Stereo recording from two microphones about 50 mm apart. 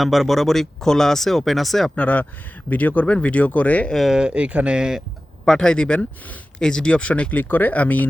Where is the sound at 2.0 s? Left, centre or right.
Left.